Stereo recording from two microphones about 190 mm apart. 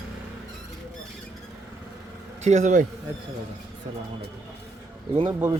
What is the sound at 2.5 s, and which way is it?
Speech, 40° right (ahead or behind).